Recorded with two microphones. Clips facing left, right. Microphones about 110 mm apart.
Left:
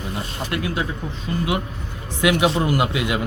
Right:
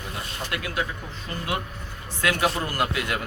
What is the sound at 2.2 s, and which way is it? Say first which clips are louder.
Speech: left 6 dB; 15° left (ahead or behind).